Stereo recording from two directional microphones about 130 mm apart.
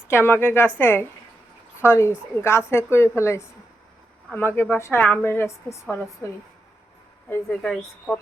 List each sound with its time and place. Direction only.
0.1 s a woman's voice: 15° left (ahead or behind)
7.4 s a woman's voice: 5° left (ahead or behind)